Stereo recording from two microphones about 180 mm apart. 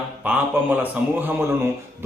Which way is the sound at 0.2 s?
10° right (ahead or behind).